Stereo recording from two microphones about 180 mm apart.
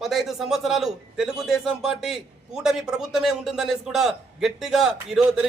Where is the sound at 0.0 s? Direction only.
Centre (ahead or behind).